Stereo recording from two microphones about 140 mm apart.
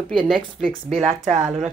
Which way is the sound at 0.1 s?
5° left (ahead or behind).